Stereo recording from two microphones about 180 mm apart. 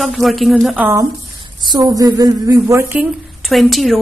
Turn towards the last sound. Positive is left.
turn(degrees=0)  # may be behind; listen again after turning